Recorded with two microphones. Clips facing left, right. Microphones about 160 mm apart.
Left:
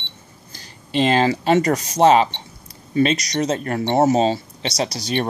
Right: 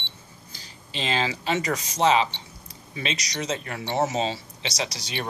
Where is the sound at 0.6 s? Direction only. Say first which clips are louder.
Left 14 dB; 50° left (ahead or behind).